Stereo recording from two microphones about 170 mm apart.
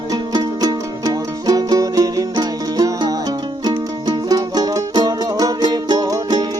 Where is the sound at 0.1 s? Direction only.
25° right (ahead or behind).